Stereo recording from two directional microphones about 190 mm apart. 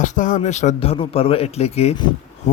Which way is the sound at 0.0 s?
40° left (ahead or behind).